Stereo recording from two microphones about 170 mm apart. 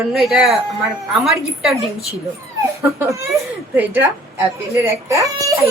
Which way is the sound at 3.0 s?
15° right (ahead or behind).